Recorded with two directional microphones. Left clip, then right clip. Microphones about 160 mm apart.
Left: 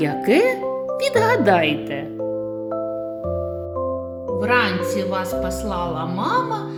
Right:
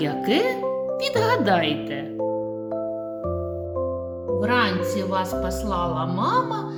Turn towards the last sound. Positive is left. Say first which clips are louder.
# left 2 dB
turn(degrees=45)  # may be behind; listen again after turning